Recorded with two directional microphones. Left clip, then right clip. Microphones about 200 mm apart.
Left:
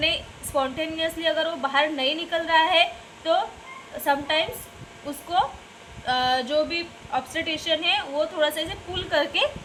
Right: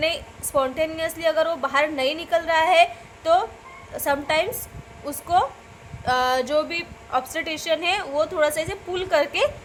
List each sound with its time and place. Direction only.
0.0 s a woman's voice: 50° right (ahead or behind)
6.1 s a woman's voice: 50° right (ahead or behind)